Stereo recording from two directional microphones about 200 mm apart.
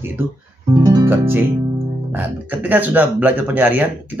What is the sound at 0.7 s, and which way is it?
Music, 20° right (ahead or behind).